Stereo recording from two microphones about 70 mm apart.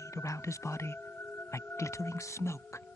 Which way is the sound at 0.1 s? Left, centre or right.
Left.